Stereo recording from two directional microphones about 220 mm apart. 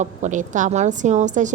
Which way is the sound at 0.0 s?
35° right (ahead or behind).